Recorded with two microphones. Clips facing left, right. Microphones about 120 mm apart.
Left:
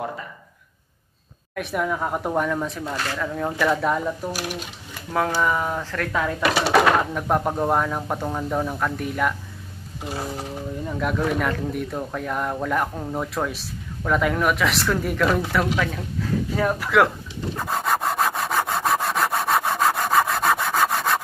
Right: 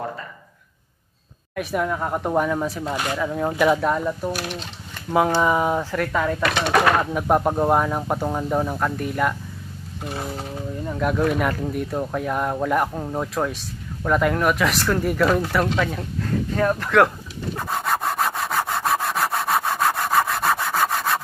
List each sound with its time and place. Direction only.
1.5 s speech: centre (ahead or behind)
2.8 s speech: 15° right (ahead or behind)
3.8 s speech: centre (ahead or behind)
4.3 s speech: 10° left (ahead or behind)
5.1 s speech: 15° right (ahead or behind)
6.5 s speech: 10° left (ahead or behind)
7.2 s speech: 10° right (ahead or behind)
10.9 s a sound: centre (ahead or behind)
11.2 s speech: 5° right (ahead or behind)
17.8 s wood: centre (ahead or behind)